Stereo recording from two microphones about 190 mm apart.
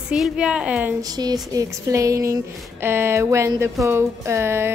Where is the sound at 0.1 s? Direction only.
5° right (ahead or behind).